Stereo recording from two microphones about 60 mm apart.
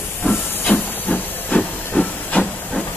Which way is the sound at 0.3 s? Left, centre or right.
Left.